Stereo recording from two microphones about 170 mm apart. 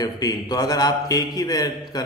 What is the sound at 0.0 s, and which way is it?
A man's voice, 20° left (ahead or behind).